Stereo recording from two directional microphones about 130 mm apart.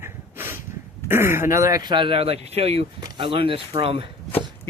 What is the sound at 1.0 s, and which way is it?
Speech, 20° right (ahead or behind).